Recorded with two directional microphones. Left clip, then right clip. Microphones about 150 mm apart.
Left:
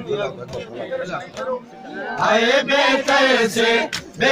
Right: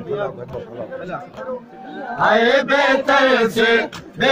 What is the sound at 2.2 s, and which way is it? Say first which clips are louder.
Chant: right 2 dB; 40° right (ahead or behind).